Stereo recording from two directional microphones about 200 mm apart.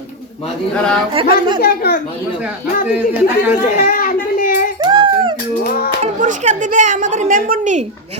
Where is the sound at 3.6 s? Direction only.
45° left (ahead or behind).